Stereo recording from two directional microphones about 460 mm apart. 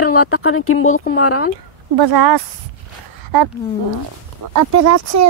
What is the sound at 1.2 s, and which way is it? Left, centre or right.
Speech, left.